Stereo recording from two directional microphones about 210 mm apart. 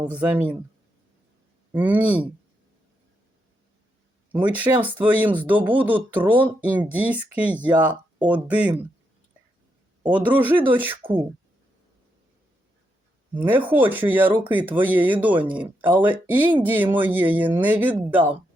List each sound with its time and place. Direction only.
0.1 s speech: 5° right (ahead or behind)
1.7 s speech: 10° right (ahead or behind)
4.3 s speech: 5° right (ahead or behind)
10.1 s speech: 10° right (ahead or behind)
11.0 s speech: 25° right (ahead or behind)
13.3 s speech: 10° right (ahead or behind)